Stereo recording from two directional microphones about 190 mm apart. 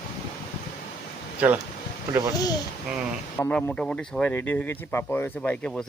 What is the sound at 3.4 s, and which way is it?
Speech, 5° left (ahead or behind).